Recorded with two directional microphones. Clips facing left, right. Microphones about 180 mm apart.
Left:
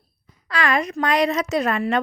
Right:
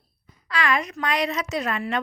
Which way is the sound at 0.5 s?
45° left (ahead or behind).